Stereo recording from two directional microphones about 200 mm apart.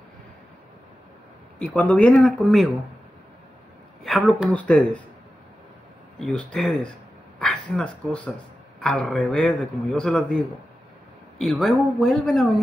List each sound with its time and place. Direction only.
1.6 s a man's voice: 5° left (ahead or behind)
4.0 s a man's voice: centre (ahead or behind)
6.1 s a man's voice: 5° left (ahead or behind)